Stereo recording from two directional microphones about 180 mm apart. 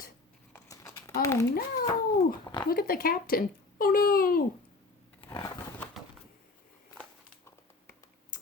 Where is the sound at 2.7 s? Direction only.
55° left (ahead or behind).